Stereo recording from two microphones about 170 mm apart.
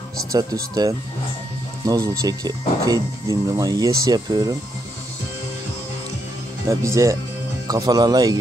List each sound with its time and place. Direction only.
0.3 s speech: 20° right (ahead or behind)
1.9 s speech: 20° right (ahead or behind)
6.7 s speech: 20° right (ahead or behind)